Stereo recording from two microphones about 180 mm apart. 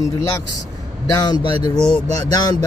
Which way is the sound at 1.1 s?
20° left (ahead or behind).